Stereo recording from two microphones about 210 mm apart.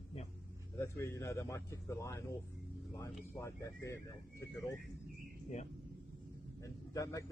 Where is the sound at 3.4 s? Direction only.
15° left (ahead or behind).